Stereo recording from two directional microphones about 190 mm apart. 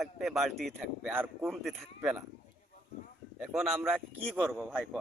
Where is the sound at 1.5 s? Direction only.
Centre (ahead or behind).